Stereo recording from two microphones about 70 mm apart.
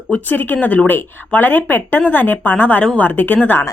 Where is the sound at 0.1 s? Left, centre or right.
Left.